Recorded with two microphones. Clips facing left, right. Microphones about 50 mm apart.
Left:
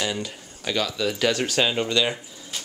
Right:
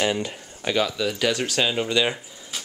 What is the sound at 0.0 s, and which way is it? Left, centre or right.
Speech, right.